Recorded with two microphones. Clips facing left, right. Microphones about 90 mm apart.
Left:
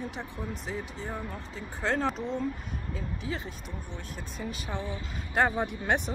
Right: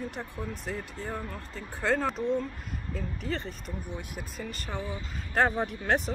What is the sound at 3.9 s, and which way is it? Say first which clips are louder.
Speech: right 2 dB; 10° right (ahead or behind).